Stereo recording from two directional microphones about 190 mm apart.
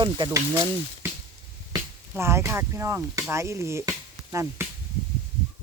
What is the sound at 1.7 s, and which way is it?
Speech, 15° right (ahead or behind).